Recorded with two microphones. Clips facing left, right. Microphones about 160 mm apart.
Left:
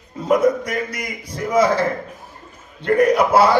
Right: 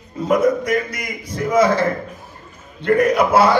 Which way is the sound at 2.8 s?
35° left (ahead or behind).